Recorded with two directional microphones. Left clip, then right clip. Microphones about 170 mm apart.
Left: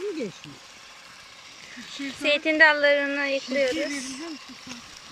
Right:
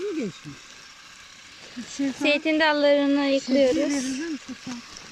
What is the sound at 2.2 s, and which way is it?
Speech, 10° right (ahead or behind).